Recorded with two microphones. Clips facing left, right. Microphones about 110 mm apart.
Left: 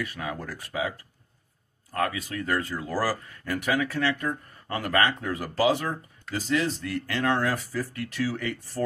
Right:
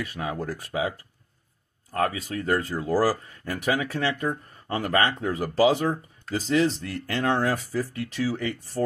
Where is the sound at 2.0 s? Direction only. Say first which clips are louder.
Right 2 dB; 30° right (ahead or behind).